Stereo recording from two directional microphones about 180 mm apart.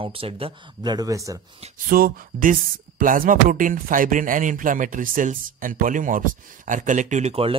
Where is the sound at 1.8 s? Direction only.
55° right (ahead or behind).